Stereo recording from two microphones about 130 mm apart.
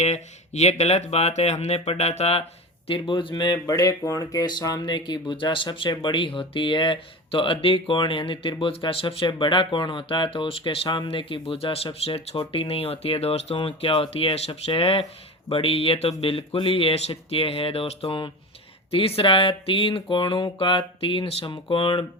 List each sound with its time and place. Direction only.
0.0 s speech: 60° left (ahead or behind)
2.8 s speech: 40° left (ahead or behind)